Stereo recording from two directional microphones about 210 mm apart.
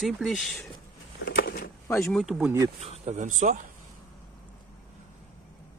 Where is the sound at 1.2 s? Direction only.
45° left (ahead or behind).